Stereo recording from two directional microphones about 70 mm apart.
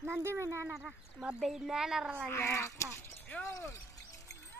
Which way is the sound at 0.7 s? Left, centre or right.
Centre.